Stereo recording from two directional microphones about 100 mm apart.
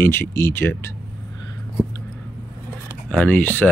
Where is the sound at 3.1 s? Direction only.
15° left (ahead or behind).